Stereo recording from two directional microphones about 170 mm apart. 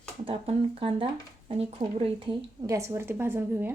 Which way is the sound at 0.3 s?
35° right (ahead or behind).